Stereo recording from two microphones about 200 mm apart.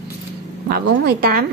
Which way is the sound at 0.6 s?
50° right (ahead or behind).